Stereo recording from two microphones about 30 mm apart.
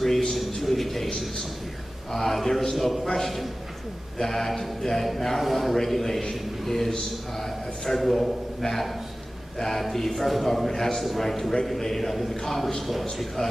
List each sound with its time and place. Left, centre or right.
0.0 s a sound: centre
0.6 s a man's voice: centre
4.2 s a man's voice: centre
5.4 s a man's voice: centre
13.4 s a man's voice: left